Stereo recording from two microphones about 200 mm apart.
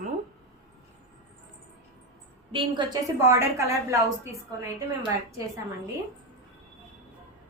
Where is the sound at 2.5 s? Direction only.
20° right (ahead or behind).